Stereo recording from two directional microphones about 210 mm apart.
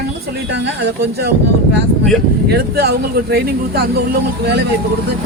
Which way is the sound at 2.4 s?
50° right (ahead or behind).